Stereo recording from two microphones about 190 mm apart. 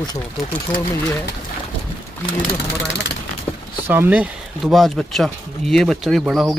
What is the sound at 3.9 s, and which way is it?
Speech, 10° right (ahead or behind).